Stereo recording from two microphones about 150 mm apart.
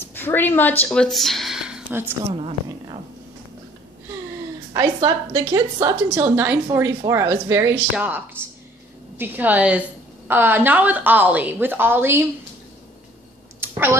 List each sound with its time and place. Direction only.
0.0 s speech: 15° left (ahead or behind); by 2.1 s 10° right (ahead or behind)
2.3 s speech: 35° right (ahead or behind)
4.7 s a woman's voice: 25° right (ahead or behind)
6.0 s a woman's voice: 15° right (ahead or behind)
9.2 s a woman's voice: 10° right (ahead or behind)
13.6 s a sound: 15° right (ahead or behind)